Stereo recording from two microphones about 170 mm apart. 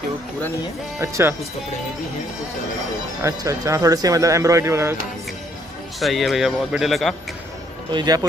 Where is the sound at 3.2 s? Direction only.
20° right (ahead or behind).